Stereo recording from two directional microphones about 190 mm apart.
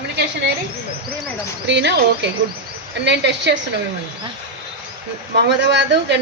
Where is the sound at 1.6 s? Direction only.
65° right (ahead or behind).